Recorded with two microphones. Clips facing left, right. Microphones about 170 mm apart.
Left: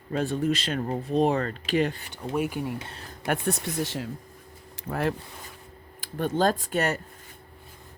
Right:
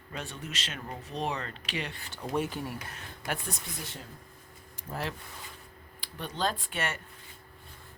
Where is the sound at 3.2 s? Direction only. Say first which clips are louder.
Left 9 dB; 60° left (ahead or behind); by 4.1 s 90° left.